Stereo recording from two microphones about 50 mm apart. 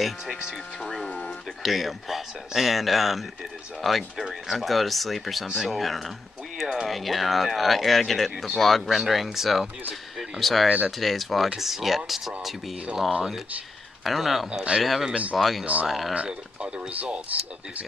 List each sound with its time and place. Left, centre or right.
0.0 s speech: centre
1.0 s a sound: left
1.6 s speech: centre
14.0 s speech: centre
14.5 s speech: right
14.8 s speech: centre
15.0 s speech: right
15.3 s speech: centre
15.6 s speech: right